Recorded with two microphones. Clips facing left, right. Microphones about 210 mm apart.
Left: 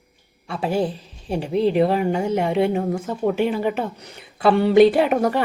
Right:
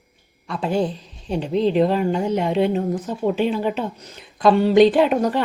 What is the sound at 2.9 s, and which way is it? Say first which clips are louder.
Speech: even; 10° left (ahead or behind).